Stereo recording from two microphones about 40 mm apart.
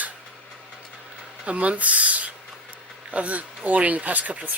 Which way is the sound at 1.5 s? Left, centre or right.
Right.